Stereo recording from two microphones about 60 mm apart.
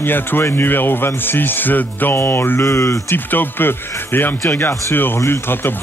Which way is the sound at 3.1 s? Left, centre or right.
Left.